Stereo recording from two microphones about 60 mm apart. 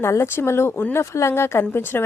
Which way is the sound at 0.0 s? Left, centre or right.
Left.